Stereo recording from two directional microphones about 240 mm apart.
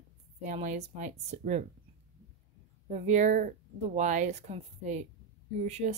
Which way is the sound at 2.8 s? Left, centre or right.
Right.